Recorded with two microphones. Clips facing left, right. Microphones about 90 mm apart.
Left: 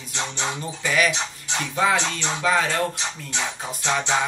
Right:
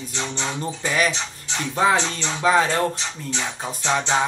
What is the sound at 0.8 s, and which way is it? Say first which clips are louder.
Speech: left 1 dB; 30° right (ahead or behind).